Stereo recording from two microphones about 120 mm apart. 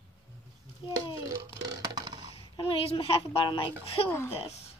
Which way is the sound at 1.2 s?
30° right (ahead or behind).